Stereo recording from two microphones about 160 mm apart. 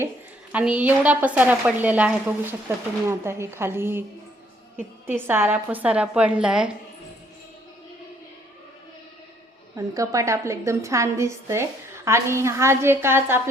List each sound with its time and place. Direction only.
0.5 s a woman's voice: 10° right (ahead or behind)
5.0 s a woman's voice: 15° right (ahead or behind)
9.7 s a woman's voice: 20° right (ahead or behind)